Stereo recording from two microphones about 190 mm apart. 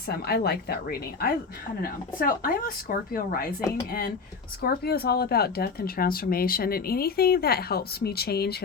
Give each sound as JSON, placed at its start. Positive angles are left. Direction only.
{"t": 0.3, "sound": "speech", "side_deg": 55}
{"t": 4.6, "sound": "speech", "side_deg": 55}